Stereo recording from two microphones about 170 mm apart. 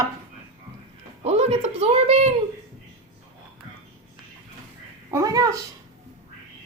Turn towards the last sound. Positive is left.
turn(degrees=-20)  # may be behind; listen again after turning